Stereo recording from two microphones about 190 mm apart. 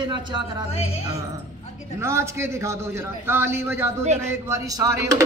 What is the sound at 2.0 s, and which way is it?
A man's voice, 15° right (ahead or behind).